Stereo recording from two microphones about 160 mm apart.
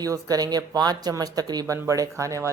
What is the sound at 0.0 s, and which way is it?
Speech, 25° right (ahead or behind).